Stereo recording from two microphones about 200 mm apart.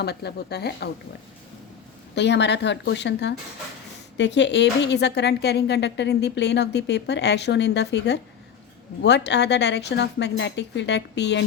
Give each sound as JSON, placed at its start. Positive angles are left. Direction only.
{"t": 0.0, "sound": "speech", "side_deg": 55}
{"t": 2.1, "sound": "speech", "side_deg": 60}